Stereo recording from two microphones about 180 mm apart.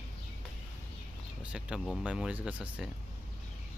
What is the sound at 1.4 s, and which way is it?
Speech, 5° right (ahead or behind).